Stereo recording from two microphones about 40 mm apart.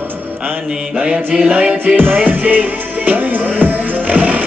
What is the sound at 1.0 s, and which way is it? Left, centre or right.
Mantra, right.